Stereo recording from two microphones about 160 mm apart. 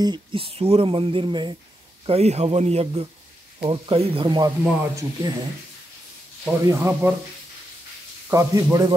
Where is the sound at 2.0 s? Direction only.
40° right (ahead or behind).